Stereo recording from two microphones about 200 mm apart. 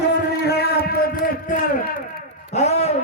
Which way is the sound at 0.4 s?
50° left (ahead or behind).